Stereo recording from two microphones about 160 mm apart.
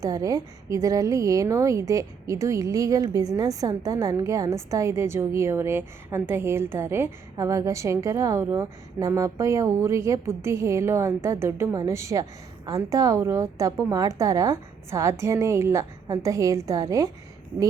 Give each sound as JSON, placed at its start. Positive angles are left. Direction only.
{"t": 0.0, "sound": "a woman's voice", "side_deg": -20}